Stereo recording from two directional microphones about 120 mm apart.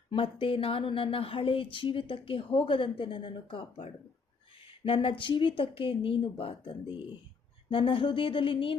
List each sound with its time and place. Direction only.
0.1 s speech: 45° left (ahead or behind)